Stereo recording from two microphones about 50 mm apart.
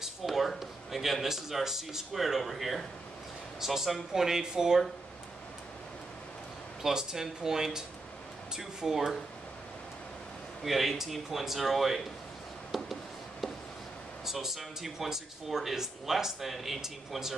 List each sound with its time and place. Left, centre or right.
0.0 s speech: centre
6.8 s speech: centre
10.6 s speech: centre
12.7 s a sound: centre
14.2 s speech: centre